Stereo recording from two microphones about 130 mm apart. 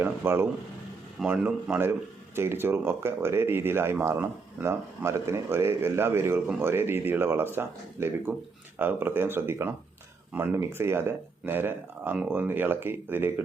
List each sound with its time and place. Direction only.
0.0 s speech: 15° right (ahead or behind)
1.2 s speech: 5° right (ahead or behind)
1.9 s speech: 20° right (ahead or behind)